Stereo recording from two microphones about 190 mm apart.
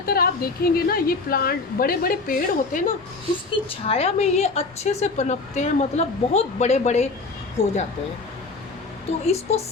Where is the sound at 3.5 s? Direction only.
30° left (ahead or behind).